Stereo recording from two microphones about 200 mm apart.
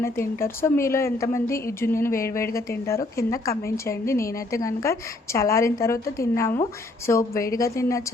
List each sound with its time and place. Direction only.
0.0 s a woman's voice: 10° left (ahead or behind)